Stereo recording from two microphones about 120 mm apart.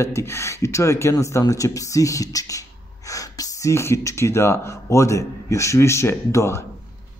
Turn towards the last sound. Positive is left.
turn(degrees=25)  # may be behind; listen again after turning